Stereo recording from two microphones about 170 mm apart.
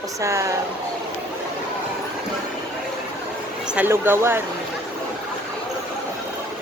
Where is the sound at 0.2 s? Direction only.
20° right (ahead or behind).